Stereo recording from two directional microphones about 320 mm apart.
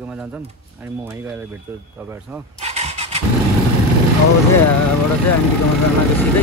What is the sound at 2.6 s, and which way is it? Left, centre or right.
Vehicle, centre.